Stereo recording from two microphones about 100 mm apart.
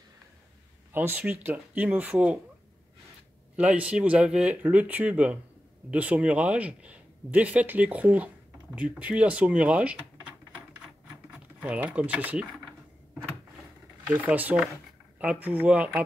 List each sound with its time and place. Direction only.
0.9 s speech: 20° right (ahead or behind)
3.5 s speech: 15° right (ahead or behind)
11.3 s speech: 15° right (ahead or behind)
14.1 s speech: 15° right (ahead or behind)